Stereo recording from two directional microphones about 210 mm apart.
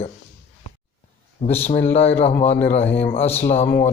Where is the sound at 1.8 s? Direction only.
30° left (ahead or behind).